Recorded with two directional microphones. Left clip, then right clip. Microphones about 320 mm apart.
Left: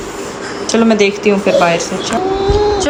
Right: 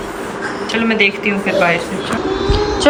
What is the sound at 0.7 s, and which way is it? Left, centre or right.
Speech, centre.